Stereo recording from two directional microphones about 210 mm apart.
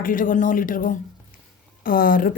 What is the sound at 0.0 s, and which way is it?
A woman's voice, 40° left (ahead or behind).